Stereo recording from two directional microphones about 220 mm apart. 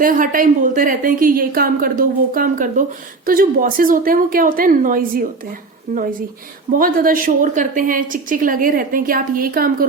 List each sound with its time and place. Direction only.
0.0 s a woman's voice: 35° right (ahead or behind)